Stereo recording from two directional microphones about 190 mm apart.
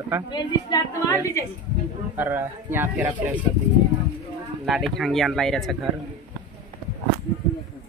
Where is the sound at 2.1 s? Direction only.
10° right (ahead or behind).